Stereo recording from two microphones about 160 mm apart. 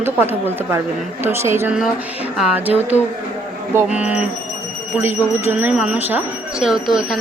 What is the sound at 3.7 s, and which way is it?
Speech, 10° right (ahead or behind).